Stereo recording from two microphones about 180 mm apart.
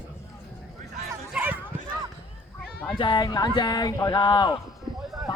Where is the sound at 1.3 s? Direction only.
10° right (ahead or behind).